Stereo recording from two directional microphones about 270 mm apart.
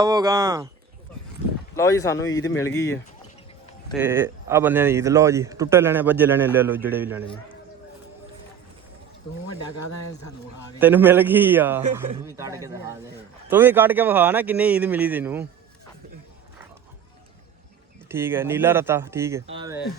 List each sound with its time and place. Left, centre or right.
0.0 s speech: centre
1.7 s speech: centre
3.9 s speech: centre
9.5 s speech: left
10.8 s speech: centre
18.1 s speech: centre